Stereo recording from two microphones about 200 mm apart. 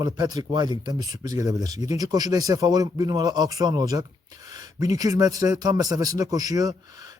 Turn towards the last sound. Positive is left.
turn(degrees=-20)  # may be behind; listen again after turning